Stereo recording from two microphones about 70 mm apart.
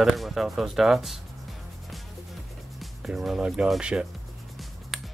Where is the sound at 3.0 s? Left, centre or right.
Centre.